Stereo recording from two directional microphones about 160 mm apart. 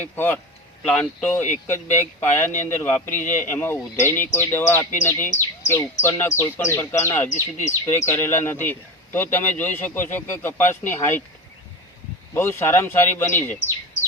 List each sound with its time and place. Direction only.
0.0 s speech: 10° left (ahead or behind)
12.3 s speech: 15° left (ahead or behind)